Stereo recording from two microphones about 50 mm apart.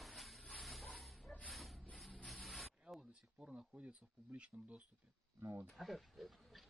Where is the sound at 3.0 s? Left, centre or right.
Right.